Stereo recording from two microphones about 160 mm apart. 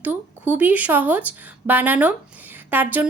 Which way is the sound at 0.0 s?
10° right (ahead or behind).